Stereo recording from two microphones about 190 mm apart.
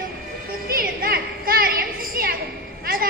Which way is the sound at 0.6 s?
50° right (ahead or behind).